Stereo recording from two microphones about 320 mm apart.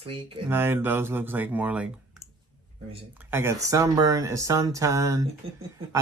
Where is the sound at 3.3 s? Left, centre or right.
Centre.